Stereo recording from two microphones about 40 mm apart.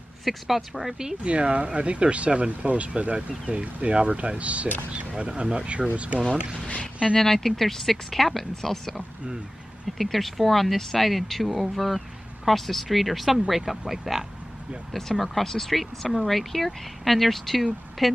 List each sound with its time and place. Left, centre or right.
0.2 s speech: centre
1.2 s speech: right
6.7 s speech: left
7.2 s speech: centre
14.9 s speech: centre